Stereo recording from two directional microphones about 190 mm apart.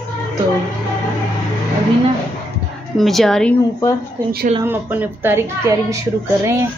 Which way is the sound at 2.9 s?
Centre (ahead or behind).